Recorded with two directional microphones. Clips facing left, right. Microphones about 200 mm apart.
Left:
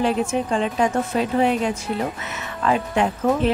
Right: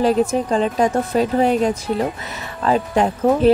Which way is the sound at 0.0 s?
40° right (ahead or behind).